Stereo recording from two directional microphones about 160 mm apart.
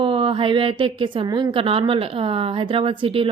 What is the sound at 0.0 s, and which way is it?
A woman's voice, 35° right (ahead or behind).